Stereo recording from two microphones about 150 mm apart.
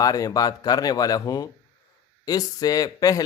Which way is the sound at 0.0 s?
25° left (ahead or behind).